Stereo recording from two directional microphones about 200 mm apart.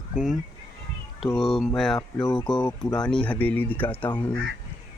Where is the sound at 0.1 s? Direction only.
5° right (ahead or behind).